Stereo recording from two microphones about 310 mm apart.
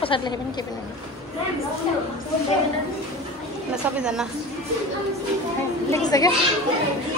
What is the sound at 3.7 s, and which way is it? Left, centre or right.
Speech, centre.